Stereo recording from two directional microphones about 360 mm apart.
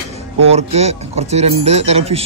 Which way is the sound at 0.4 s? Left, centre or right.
Centre.